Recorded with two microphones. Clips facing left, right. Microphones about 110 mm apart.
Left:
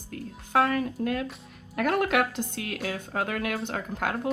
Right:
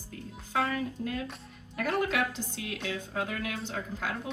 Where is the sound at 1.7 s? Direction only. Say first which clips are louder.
Left 5 dB; 65° left (ahead or behind).